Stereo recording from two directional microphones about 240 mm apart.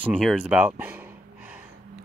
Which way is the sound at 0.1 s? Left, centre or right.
Centre.